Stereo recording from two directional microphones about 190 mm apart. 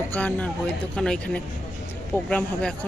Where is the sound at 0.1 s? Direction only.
10° left (ahead or behind).